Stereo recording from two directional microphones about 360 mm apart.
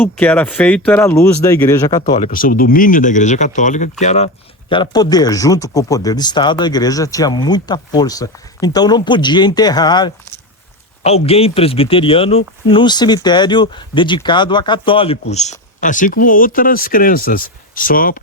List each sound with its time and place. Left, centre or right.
0.0 s speech: centre; by 18.2 s left